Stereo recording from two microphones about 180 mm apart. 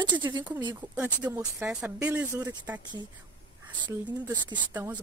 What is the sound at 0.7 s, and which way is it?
Speech, 10° right (ahead or behind).